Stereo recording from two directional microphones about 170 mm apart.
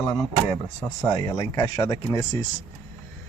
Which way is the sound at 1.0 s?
20° left (ahead or behind).